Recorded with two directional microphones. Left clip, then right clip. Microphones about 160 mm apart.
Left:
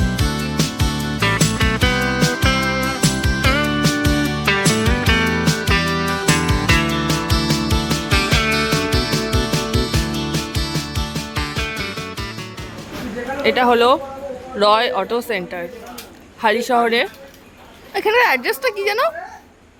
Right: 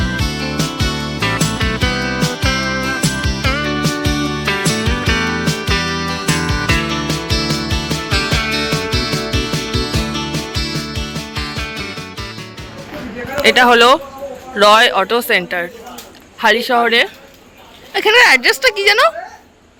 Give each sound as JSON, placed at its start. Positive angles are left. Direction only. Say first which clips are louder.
{"t": 0.0, "sound": "music", "louder": "right 3 dB", "side_deg": 0}
{"t": 13.4, "sound": "a woman's voice", "louder": "right 6 dB", "side_deg": 0}
{"t": 16.4, "sound": "a woman's voice", "louder": "right 3 dB", "side_deg": 10}